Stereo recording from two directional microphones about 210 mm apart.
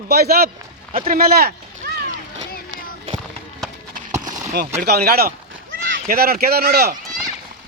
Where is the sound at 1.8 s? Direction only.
50° right (ahead or behind).